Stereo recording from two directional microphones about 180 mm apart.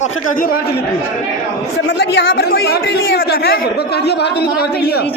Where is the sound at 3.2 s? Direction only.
60° left (ahead or behind).